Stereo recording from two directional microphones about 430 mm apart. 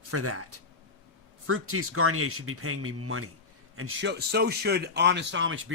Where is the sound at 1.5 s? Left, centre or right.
Right.